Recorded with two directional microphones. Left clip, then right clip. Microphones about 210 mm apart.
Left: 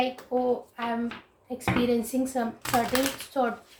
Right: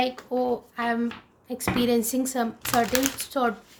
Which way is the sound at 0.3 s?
50° right (ahead or behind).